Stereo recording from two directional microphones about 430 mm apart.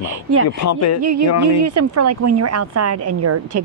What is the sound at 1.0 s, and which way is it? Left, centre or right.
A woman's voice, right.